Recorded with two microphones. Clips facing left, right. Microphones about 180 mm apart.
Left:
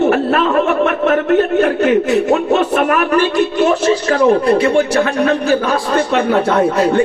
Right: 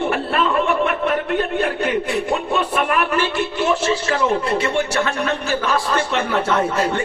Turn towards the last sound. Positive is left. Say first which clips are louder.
# left 6 dB
turn(degrees=35)  # may be behind; listen again after turning